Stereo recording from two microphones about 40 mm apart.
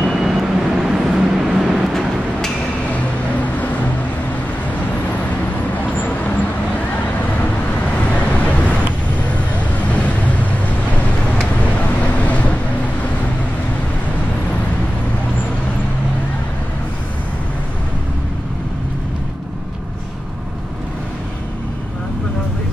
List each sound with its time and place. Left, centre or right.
0.0 s vehicle: centre
8.1 s vehicle: left
9.8 s vehicle: left
12.0 s boat: left